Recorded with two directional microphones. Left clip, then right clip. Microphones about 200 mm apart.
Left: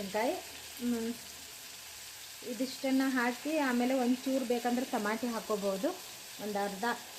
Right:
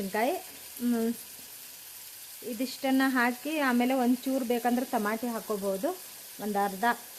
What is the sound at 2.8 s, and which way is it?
Frying, 45° right (ahead or behind).